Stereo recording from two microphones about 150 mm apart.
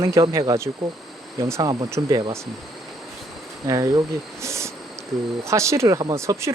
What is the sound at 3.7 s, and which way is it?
Speech, 25° right (ahead or behind).